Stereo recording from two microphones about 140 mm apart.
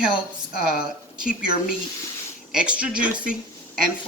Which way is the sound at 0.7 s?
5° right (ahead or behind).